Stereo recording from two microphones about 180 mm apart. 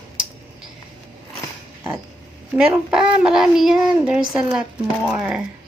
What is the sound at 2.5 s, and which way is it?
A child's voice, 5° right (ahead or behind).